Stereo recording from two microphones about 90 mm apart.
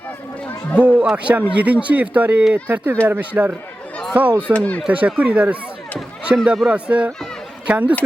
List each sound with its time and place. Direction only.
0.8 s speech: 20° right (ahead or behind)
4.5 s speech: 15° left (ahead or behind)
4.9 s speech: 15° right (ahead or behind)